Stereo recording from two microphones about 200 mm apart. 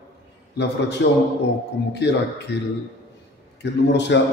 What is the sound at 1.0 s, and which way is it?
Speech, 60° left (ahead or behind).